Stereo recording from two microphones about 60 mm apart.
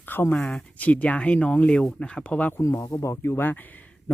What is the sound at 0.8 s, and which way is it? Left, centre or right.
Speech, left.